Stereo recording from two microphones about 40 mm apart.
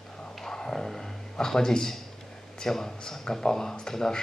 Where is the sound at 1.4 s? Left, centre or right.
Centre.